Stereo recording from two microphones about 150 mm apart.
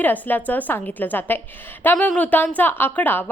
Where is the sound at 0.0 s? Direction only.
10° left (ahead or behind).